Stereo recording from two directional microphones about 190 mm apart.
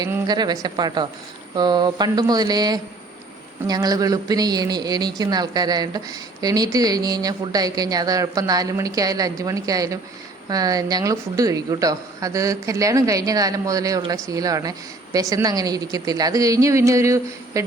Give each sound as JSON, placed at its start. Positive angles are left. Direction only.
{"t": 0.0, "sound": "a woman's voice", "side_deg": -20}